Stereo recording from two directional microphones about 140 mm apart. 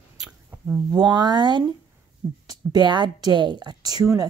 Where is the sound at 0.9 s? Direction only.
30° right (ahead or behind).